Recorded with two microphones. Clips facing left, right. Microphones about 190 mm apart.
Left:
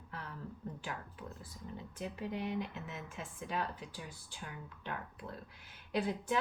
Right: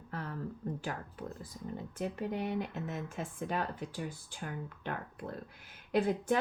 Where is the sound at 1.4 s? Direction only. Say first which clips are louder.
Right 5 dB; 45° right (ahead or behind).